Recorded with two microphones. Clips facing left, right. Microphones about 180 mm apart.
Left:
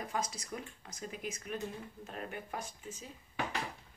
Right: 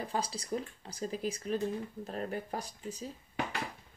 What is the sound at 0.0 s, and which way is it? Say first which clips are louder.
Speech: right 3 dB; 30° right (ahead or behind).